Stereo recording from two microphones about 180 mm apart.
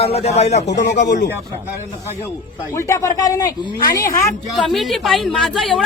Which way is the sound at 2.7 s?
15° left (ahead or behind).